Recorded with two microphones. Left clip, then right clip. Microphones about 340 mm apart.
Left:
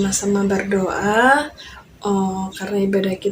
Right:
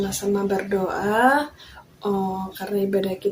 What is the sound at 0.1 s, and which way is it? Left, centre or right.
Speech, right.